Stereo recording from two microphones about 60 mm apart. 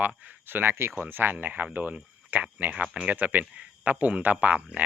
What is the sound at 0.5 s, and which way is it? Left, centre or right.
Speech, right.